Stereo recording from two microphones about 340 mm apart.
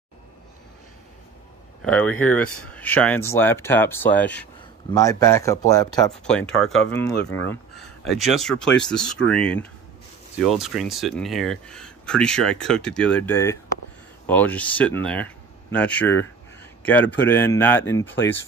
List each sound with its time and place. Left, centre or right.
1.8 s speech: centre
2.4 s speech: left
2.7 s speech: centre